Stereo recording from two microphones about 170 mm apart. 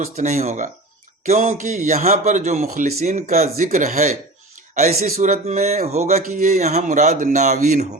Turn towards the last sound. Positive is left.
turn(degrees=-45)  # may be behind; listen again after turning